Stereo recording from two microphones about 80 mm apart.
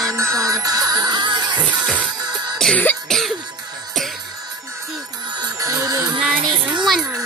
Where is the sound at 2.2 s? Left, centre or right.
Right.